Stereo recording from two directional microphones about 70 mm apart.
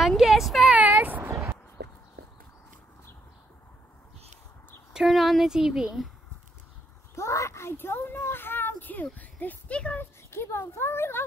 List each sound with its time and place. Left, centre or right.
0.2 s speech: centre
0.7 s a sound: right
4.9 s speech: centre
7.2 s a sound: left
9.8 s speech: centre
10.3 s speech: left